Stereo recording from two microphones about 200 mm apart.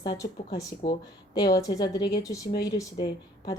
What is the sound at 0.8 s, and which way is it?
Speech, 45° left (ahead or behind).